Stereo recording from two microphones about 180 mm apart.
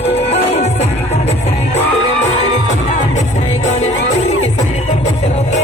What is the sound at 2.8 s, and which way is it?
Music, 40° left (ahead or behind).